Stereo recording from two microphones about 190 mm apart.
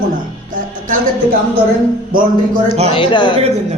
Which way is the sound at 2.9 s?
25° left (ahead or behind).